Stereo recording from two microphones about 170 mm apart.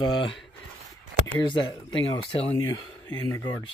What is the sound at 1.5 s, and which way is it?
Speech, 25° left (ahead or behind).